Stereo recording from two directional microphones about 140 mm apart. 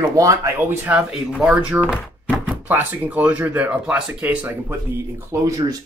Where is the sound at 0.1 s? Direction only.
20° right (ahead or behind).